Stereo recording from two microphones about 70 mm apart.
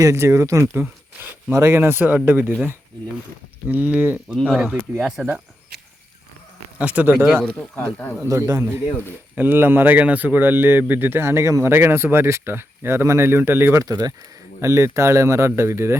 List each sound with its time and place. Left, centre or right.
0.0 s speech: right
3.7 s speech: right
4.4 s speech: centre
6.7 s speech: right
7.4 s speech: centre
8.3 s speech: right
9.3 s speech: right
13.7 s speech: right
14.6 s speech: right